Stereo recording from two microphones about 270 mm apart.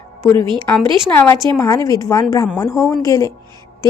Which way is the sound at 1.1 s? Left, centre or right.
Centre.